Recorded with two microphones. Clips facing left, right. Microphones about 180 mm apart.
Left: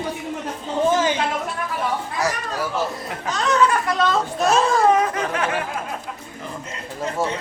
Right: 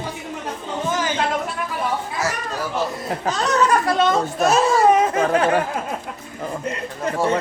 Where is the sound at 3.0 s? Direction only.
35° right (ahead or behind).